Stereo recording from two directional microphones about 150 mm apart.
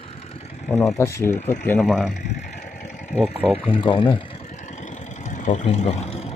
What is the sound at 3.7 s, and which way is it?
Speech, 35° left (ahead or behind).